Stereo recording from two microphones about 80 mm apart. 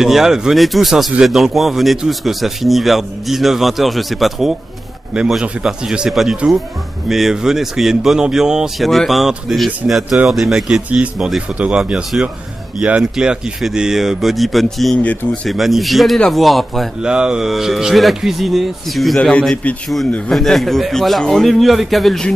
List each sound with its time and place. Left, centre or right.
0.0 s a man's voice: centre
17.0 s speech: centre
19.1 s a man's voice: centre